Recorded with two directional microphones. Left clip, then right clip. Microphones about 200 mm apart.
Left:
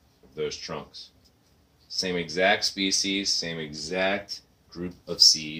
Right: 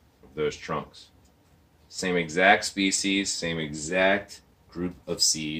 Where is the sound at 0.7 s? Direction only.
10° right (ahead or behind).